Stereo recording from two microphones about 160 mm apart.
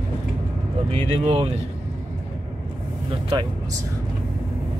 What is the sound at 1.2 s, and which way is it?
Speech, 35° right (ahead or behind).